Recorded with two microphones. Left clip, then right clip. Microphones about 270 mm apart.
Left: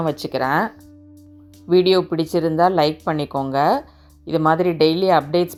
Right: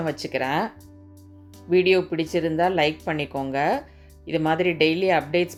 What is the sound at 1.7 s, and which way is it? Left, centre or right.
Speech, centre.